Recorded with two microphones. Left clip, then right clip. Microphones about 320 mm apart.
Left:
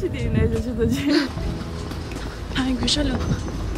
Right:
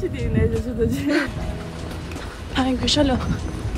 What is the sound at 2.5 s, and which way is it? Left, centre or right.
Speech, centre.